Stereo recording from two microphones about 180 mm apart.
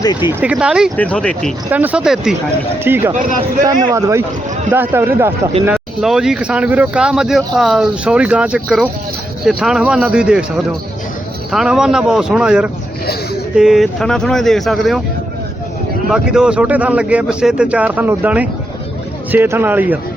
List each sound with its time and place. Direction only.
0.0 s speech: 25° left (ahead or behind)
0.3 s speech: 10° right (ahead or behind)
0.9 s speech: 5° left (ahead or behind)
1.7 s speech: 10° right (ahead or behind)
5.6 s speech: centre (ahead or behind)
11.5 s speech: 5° right (ahead or behind)
16.1 s speech: 5° right (ahead or behind)